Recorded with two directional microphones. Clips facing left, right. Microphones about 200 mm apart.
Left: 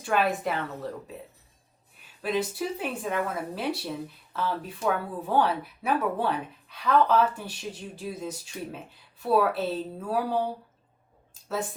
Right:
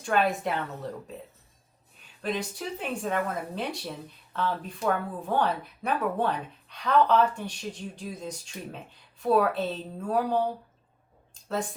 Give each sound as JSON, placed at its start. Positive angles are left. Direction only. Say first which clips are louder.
{"t": 0.0, "sound": "a woman's voice", "louder": "even", "side_deg": 5}
{"t": 2.2, "sound": "a woman's voice", "louder": "left 3 dB", "side_deg": 5}